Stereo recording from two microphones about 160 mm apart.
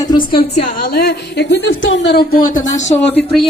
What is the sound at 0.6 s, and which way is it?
A woman's voice, 55° left (ahead or behind).